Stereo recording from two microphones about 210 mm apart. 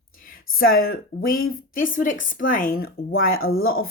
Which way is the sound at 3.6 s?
45° left (ahead or behind).